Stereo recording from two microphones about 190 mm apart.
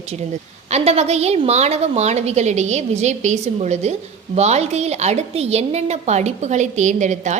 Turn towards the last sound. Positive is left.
turn(degrees=-40)  # may be behind; listen again after turning